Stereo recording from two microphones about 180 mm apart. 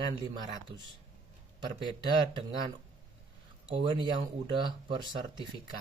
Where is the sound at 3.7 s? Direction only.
25° right (ahead or behind).